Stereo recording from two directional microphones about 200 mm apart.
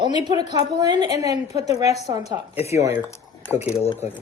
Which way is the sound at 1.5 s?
35° left (ahead or behind).